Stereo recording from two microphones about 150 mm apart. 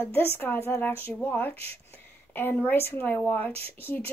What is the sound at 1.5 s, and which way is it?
Speech, 40° right (ahead or behind).